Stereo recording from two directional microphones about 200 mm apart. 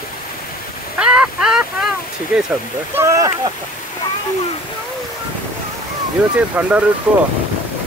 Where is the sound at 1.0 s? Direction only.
5° right (ahead or behind).